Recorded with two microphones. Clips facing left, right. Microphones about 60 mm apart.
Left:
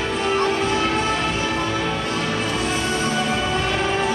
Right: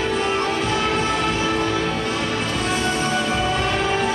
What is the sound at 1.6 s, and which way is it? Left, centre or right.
Music, centre.